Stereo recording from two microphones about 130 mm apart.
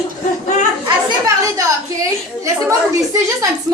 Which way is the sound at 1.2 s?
25° right (ahead or behind).